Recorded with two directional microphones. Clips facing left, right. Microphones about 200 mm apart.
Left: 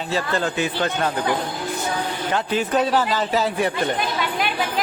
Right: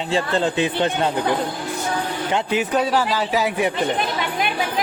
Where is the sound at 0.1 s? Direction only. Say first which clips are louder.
Right 3 dB; 25° right (ahead or behind).